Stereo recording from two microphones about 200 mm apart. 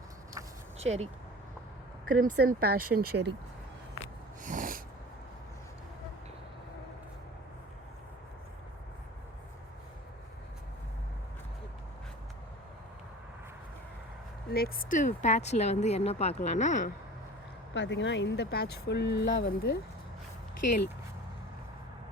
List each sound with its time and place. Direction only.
0.8 s speech: 30° right (ahead or behind)
2.0 s speech: 45° right (ahead or behind)
4.4 s snort: 40° right (ahead or behind)
14.5 s speech: 50° left (ahead or behind)
17.7 s speech: 65° left (ahead or behind)